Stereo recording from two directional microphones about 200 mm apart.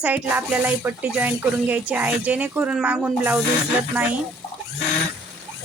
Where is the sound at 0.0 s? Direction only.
10° right (ahead or behind).